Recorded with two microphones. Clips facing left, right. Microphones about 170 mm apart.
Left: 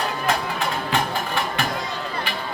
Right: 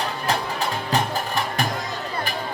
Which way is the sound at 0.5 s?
40° right (ahead or behind).